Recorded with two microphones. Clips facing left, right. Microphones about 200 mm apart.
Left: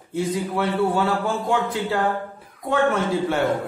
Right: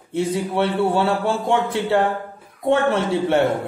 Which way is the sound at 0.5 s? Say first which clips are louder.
Right 2 dB; 30° right (ahead or behind).